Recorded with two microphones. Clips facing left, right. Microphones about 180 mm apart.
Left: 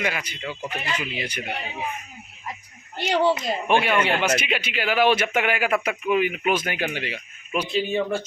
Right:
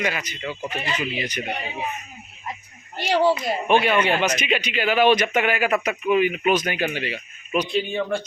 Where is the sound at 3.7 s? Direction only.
10° left (ahead or behind).